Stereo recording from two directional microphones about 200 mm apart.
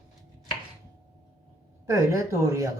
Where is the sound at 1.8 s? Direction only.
15° right (ahead or behind).